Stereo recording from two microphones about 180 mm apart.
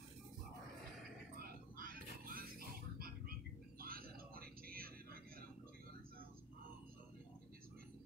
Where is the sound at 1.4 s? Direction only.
50° right (ahead or behind).